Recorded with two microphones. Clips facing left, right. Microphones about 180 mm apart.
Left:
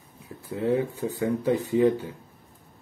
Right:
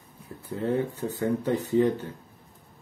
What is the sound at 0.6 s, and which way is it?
Speech, 10° left (ahead or behind).